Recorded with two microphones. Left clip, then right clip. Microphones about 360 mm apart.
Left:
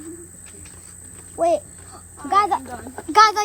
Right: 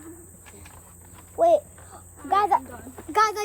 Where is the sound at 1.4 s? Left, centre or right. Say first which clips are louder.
Even; left.